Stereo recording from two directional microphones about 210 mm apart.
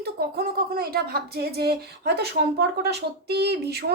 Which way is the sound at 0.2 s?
45° right (ahead or behind).